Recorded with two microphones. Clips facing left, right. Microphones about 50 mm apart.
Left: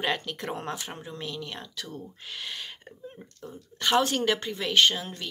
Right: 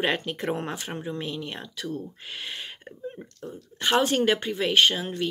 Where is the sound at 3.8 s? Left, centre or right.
Centre.